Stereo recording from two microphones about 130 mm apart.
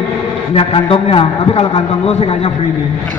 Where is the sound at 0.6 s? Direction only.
45° left (ahead or behind).